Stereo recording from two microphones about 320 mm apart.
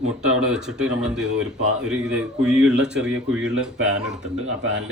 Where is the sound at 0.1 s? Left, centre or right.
Centre.